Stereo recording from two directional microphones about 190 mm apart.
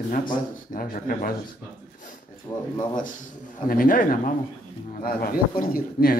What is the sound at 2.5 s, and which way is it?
Speech, 25° left (ahead or behind).